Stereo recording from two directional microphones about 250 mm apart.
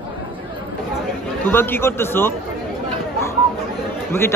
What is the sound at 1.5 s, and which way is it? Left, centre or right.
Speech, centre.